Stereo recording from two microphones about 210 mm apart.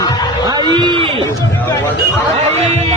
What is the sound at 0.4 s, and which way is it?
Run, 20° right (ahead or behind).